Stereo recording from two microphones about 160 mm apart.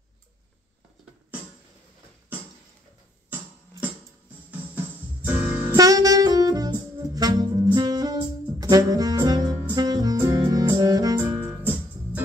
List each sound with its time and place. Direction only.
4.5 s music: 10° right (ahead or behind)
5.6 s saxophone: 20° right (ahead or behind)